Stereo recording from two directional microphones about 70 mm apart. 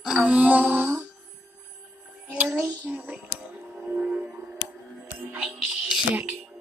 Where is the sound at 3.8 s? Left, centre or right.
Centre.